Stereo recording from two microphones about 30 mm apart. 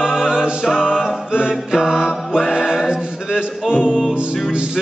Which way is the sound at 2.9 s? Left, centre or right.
Right.